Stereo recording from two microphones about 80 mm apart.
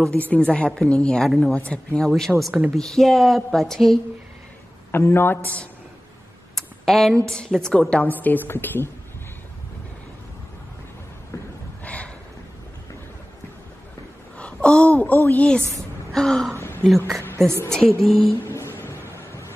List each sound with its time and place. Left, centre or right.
0.1 s a woman's voice: centre
2.0 s a woman's voice: centre
4.9 s a woman's voice: left
6.5 s computer keyboard: centre
7.2 s a woman's voice: centre
8.0 s a woman's voice: left
11.8 s a sound: centre
14.4 s a sound: centre
15.2 s a woman's voice: centre
17.5 s a woman's voice: right
18.0 s a woman's voice: centre
18.4 s music: left